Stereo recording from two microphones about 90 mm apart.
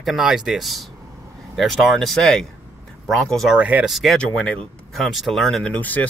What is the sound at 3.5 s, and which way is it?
Speech, 15° right (ahead or behind).